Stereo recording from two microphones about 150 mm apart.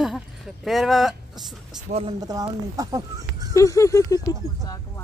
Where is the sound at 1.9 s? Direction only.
65° right (ahead or behind).